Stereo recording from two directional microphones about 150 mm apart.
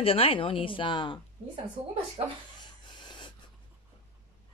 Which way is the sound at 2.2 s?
40° right (ahead or behind).